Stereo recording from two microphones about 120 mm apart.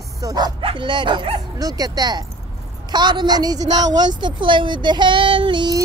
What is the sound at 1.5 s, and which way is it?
A woman's voice, 30° right (ahead or behind).